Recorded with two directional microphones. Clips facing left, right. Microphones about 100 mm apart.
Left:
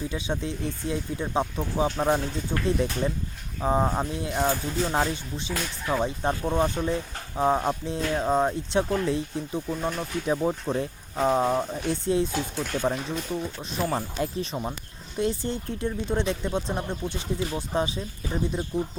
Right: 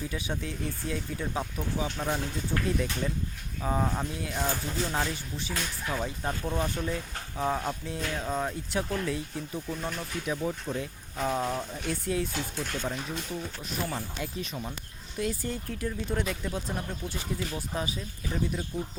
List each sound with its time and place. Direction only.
0.1 s speech: 25° left (ahead or behind)
2.0 s speech: 40° left (ahead or behind)
2.5 s speech: 25° left (ahead or behind)
10.3 s speech: 35° left (ahead or behind)
13.9 s speech: 40° left (ahead or behind)
15.2 s speech: 25° left (ahead or behind)